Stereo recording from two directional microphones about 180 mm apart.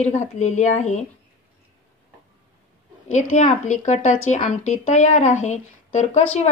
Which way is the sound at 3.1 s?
40° left (ahead or behind).